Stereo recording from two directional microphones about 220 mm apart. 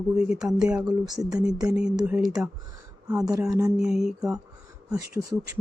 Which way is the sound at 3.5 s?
15° right (ahead or behind).